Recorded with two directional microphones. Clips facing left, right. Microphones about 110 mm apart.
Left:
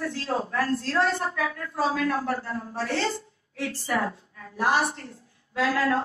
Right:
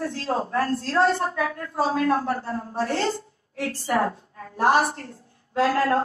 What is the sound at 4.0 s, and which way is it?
Speech, 35° right (ahead or behind).